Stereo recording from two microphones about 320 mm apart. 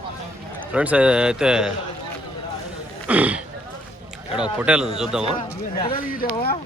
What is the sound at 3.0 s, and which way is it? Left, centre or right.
Speech, centre.